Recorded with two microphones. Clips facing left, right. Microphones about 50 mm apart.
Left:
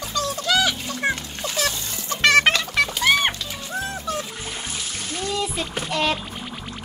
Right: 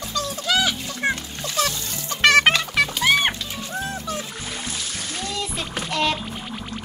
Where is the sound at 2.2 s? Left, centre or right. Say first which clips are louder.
Right 1 dB; centre.